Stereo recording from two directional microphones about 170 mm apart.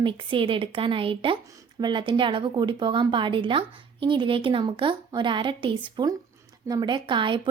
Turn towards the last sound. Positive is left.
turn(degrees=-30)  # may be behind; listen again after turning